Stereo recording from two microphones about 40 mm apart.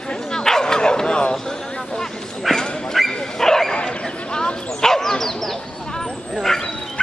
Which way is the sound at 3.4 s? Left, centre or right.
Centre.